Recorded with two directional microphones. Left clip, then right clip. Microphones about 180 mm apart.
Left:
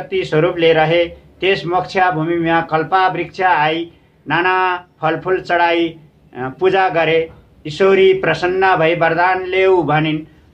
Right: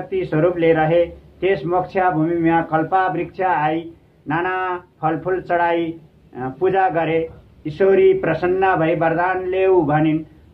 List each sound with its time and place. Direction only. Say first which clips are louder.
0.1 s a man's voice: left 3 dB; 20° left (ahead or behind)